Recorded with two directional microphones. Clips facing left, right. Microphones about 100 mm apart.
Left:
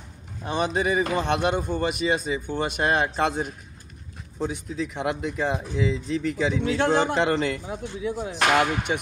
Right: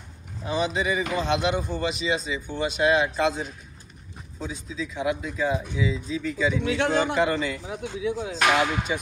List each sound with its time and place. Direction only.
0.5 s speech: 50° left (ahead or behind)
6.6 s speech: 40° left (ahead or behind)
7.2 s speech: 65° left (ahead or behind)
7.7 s speech: 45° left (ahead or behind)